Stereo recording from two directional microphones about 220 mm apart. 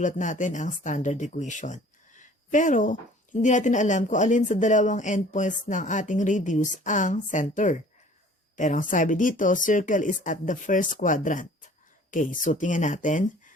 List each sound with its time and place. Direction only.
0.0 s speech: 35° left (ahead or behind)